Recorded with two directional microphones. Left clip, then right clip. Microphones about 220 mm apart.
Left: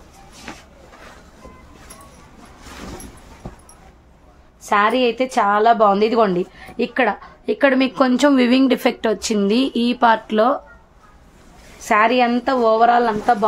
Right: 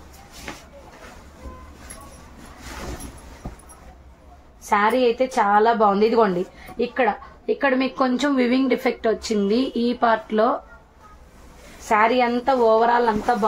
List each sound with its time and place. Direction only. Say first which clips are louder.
4.6 s a woman's voice: left 2 dB; 45° left (ahead or behind)
11.9 s a woman's voice: left 3 dB; 45° left (ahead or behind)